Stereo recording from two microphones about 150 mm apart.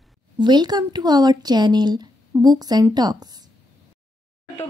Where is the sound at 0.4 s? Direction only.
30° right (ahead or behind).